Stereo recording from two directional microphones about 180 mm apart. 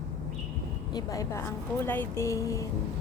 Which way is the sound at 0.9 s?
20° left (ahead or behind).